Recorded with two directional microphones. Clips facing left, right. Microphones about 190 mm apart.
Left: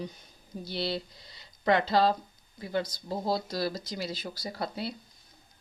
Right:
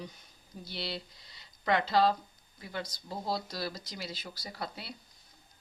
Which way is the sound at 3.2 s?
35° left (ahead or behind).